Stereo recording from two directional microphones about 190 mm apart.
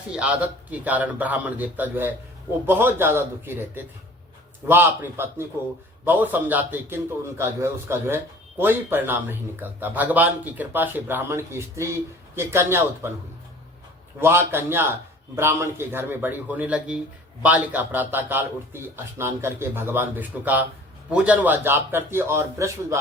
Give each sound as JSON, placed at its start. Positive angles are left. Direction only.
{"t": 0.1, "sound": "a man's voice", "side_deg": -5}
{"t": 14.2, "sound": "a man's voice", "side_deg": -10}